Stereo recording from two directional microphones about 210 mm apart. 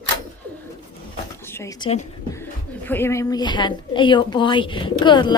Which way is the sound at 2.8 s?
10° left (ahead or behind).